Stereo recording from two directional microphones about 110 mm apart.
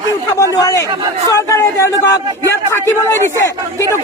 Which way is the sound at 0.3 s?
25° left (ahead or behind).